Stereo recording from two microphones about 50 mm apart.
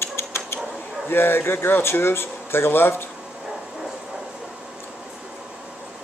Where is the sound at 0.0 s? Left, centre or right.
Left.